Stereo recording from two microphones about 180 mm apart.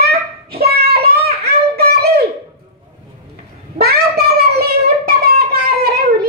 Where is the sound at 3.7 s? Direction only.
60° right (ahead or behind).